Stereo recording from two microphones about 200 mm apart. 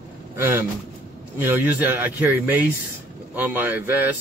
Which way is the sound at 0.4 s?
10° right (ahead or behind).